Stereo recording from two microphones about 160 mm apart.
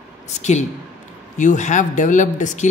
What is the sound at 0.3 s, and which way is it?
Speech, 45° left (ahead or behind).